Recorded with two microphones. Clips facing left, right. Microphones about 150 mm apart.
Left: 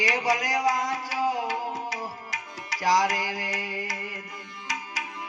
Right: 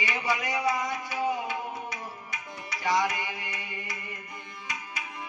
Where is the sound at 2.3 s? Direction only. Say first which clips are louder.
Left 2 dB; 90° left.